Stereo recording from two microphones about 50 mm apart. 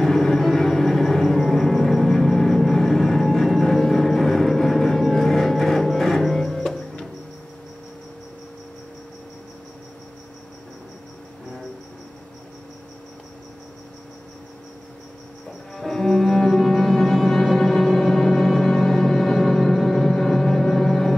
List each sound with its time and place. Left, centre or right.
0.0 s music: centre
15.7 s music: centre